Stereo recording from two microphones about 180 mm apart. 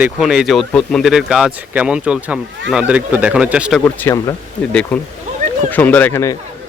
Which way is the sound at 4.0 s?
15° left (ahead or behind).